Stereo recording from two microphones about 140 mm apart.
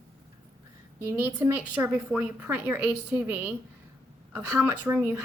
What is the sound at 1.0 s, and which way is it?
A woman's voice, 20° right (ahead or behind).